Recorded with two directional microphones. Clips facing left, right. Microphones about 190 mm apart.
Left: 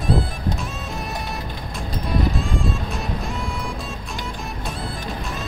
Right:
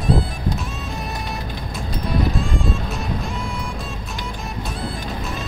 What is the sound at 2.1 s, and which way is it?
Music, centre (ahead or behind).